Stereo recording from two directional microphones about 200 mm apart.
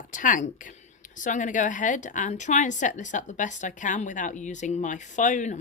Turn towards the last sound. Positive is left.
turn(degrees=40)  # may be behind; listen again after turning